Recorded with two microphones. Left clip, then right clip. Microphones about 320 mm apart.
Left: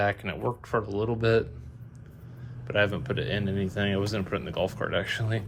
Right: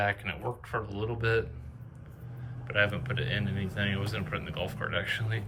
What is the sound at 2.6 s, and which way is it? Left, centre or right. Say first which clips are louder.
Speech: left 2 dB; centre.